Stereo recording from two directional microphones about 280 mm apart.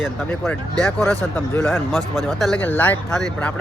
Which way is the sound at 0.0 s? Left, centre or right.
Centre.